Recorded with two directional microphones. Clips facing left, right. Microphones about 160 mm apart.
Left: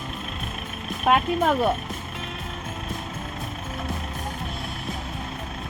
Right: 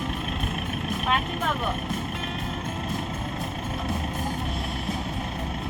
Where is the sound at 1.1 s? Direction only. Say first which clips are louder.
Left 7 dB; 55° left (ahead or behind).